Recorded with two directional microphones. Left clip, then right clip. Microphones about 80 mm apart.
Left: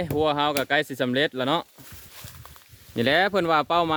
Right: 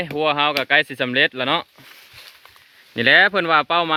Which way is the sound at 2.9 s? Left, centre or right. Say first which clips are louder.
Right 7 dB; left.